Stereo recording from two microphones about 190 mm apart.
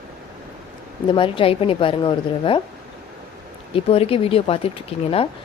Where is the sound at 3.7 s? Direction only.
30° left (ahead or behind).